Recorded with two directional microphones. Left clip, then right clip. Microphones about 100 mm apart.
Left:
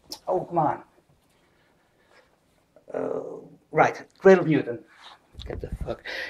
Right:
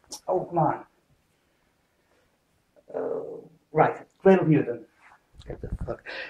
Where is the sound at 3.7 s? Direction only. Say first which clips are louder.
Left 1 dB; 30° left (ahead or behind).